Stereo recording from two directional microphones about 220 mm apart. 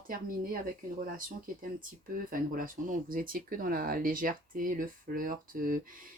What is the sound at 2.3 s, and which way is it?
Speech, 40° right (ahead or behind).